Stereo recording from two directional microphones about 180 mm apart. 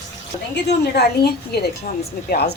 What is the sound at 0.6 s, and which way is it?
Speech, 65° left (ahead or behind).